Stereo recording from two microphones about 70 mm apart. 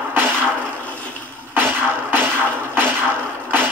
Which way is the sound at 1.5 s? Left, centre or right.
Right.